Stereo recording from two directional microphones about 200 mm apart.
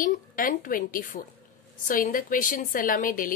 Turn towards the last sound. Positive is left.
turn(degrees=45)  # may be behind; listen again after turning